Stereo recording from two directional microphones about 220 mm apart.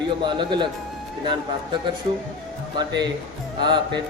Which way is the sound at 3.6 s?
20° right (ahead or behind).